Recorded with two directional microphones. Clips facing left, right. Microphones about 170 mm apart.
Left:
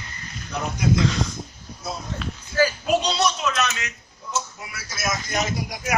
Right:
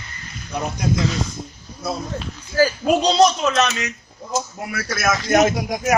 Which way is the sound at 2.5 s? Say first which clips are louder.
Right 4 dB; 40° right (ahead or behind).